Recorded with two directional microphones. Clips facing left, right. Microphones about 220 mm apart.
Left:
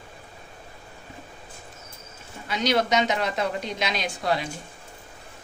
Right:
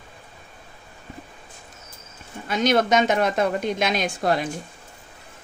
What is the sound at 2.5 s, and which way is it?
A woman's voice, 50° right (ahead or behind).